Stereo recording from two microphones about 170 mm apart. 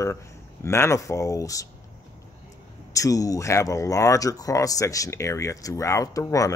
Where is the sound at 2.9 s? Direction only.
20° left (ahead or behind).